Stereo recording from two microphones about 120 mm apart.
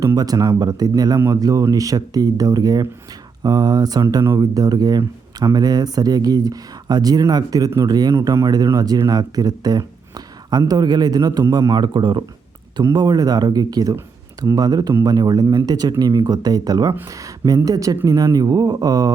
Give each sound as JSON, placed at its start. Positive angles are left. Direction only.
{"t": 0.0, "sound": "speech", "side_deg": -30}